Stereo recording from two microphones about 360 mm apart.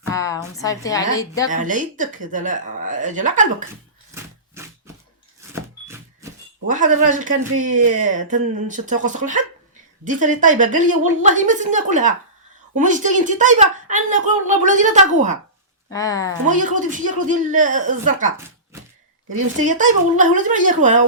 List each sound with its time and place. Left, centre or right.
0.1 s a woman's voice: centre
1.5 s speech: right
5.4 s vehicle: centre
6.7 s speech: right
15.9 s a woman's voice: centre
16.5 s speech: right